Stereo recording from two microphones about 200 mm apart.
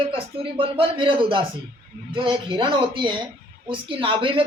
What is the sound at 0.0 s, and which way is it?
Speech, 25° right (ahead or behind).